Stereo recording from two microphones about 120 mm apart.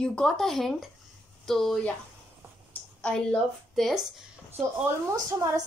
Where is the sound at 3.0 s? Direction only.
10° left (ahead or behind).